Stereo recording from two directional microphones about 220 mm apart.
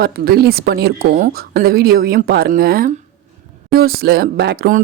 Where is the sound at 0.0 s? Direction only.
45° right (ahead or behind).